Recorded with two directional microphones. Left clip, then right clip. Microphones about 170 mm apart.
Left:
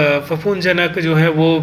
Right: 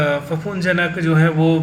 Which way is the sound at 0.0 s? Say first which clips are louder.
Left 4 dB; 30° left (ahead or behind).